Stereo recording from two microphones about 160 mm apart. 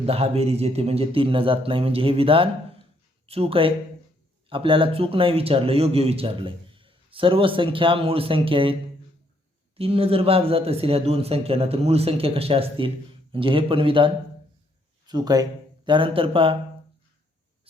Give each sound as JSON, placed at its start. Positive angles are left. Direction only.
{"t": 0.0, "sound": "speech", "side_deg": -40}
{"t": 9.7, "sound": "speech", "side_deg": -35}